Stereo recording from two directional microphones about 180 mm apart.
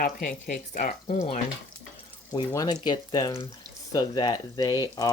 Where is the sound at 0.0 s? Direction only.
55° left (ahead or behind).